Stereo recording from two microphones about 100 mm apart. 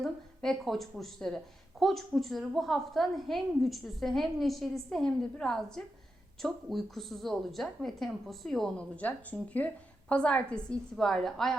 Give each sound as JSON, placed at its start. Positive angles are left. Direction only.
{"t": 0.0, "sound": "a woman's voice", "side_deg": 0}
{"t": 9.0, "sound": "a woman's voice", "side_deg": 15}